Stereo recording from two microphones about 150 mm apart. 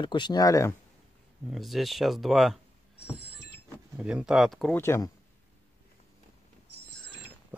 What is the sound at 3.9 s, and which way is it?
Speech, 5° right (ahead or behind).